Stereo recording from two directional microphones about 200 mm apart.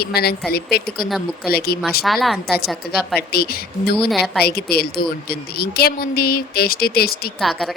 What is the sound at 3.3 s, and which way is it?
Speech, 50° left (ahead or behind).